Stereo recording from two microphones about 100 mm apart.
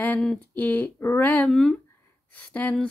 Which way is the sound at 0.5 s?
15° left (ahead or behind).